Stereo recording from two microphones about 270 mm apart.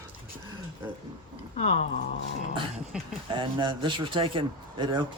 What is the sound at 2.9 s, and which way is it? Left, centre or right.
Speech, centre.